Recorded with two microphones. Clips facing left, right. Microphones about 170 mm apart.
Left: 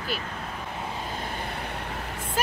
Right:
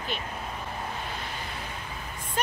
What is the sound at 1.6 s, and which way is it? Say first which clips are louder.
Vehicle: left 4 dB; 65° left (ahead or behind).